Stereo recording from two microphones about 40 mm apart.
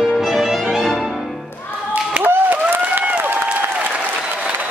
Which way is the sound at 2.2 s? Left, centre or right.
Right.